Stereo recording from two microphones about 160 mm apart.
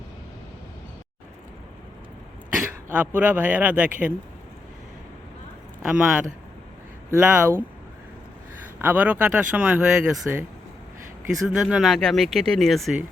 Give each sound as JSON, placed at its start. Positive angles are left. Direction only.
{"t": 2.6, "sound": "speech", "side_deg": -10}
{"t": 5.8, "sound": "speech", "side_deg": -5}
{"t": 7.2, "sound": "speech", "side_deg": -5}
{"t": 8.8, "sound": "speech", "side_deg": -10}
{"t": 11.4, "sound": "speech", "side_deg": -5}